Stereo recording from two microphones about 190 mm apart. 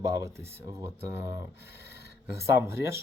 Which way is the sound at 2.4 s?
15° right (ahead or behind).